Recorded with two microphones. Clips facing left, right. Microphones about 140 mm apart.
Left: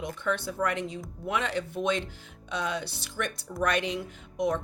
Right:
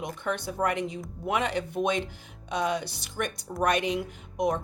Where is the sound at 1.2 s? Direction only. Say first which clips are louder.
Right 3 dB; 55° right (ahead or behind).